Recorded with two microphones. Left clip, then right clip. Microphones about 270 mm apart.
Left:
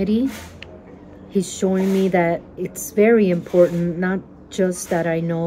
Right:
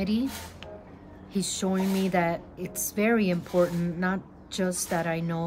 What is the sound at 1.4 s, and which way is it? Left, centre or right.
A woman's voice, right.